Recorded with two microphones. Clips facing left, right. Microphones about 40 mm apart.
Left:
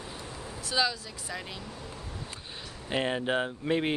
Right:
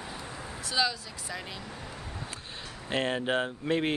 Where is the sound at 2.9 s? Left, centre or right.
Centre.